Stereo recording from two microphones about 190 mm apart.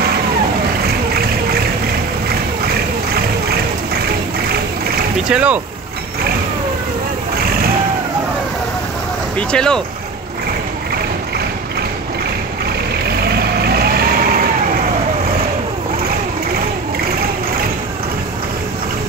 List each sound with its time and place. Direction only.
5.3 s speech: 5° right (ahead or behind)
9.5 s speech: 5° left (ahead or behind)
13.7 s vehicle: 55° right (ahead or behind)